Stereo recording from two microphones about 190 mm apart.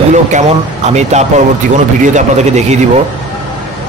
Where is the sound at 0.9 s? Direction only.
35° right (ahead or behind).